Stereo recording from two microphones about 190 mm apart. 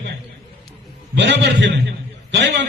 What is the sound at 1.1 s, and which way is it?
A man's voice, 65° right (ahead or behind).